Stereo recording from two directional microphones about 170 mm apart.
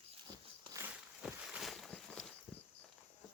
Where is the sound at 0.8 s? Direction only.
5° right (ahead or behind).